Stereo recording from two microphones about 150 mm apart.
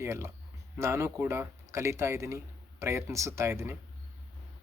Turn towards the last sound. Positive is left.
turn(degrees=-15)  # may be behind; listen again after turning